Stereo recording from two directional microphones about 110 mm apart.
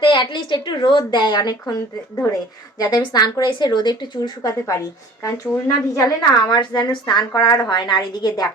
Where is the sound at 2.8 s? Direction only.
40° left (ahead or behind).